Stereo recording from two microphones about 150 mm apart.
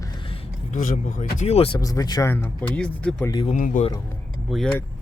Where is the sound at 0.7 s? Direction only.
55° left (ahead or behind).